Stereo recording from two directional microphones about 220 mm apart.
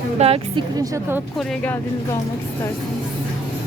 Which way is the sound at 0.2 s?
25° right (ahead or behind).